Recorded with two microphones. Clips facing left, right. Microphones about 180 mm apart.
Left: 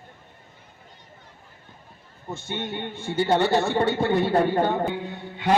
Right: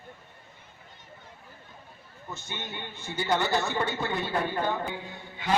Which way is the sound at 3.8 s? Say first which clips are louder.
Left 9 dB; 60° left (ahead or behind).